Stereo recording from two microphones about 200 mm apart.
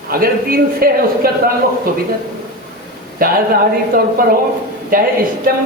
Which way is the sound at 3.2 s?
45° right (ahead or behind).